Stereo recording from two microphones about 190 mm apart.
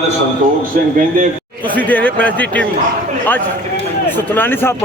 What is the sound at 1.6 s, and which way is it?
A man's voice, 10° left (ahead or behind).